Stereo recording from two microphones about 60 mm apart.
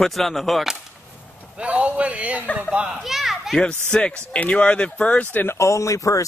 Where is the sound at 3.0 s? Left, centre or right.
Centre.